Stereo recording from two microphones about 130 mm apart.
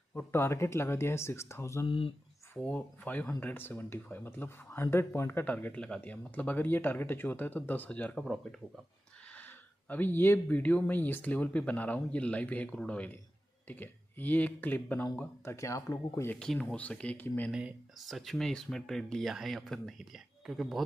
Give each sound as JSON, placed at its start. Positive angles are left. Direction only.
{"t": 0.1, "sound": "speech", "side_deg": 20}
{"t": 1.9, "sound": "speech", "side_deg": 45}
{"t": 2.5, "sound": "speech", "side_deg": 10}
{"t": 9.3, "sound": "speech", "side_deg": 15}
{"t": 16.3, "sound": "speech", "side_deg": 5}
{"t": 17.5, "sound": "speech", "side_deg": -5}